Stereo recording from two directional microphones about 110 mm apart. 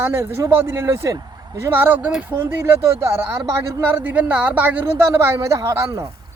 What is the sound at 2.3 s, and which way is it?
Speech, 20° right (ahead or behind).